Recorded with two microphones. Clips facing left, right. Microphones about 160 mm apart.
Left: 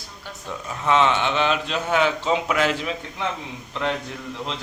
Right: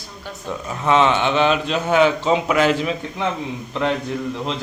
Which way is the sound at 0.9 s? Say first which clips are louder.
Right 3 dB; 15° right (ahead or behind).